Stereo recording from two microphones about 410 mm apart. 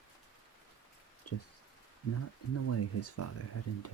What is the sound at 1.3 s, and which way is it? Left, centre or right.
Speech, left.